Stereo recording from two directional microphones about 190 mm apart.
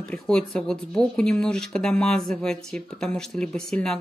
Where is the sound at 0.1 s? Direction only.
5° left (ahead or behind).